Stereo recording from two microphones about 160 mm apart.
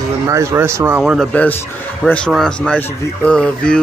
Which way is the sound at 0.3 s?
15° right (ahead or behind).